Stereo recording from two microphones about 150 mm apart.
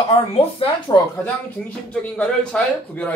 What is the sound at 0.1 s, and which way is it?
Speech, 40° left (ahead or behind).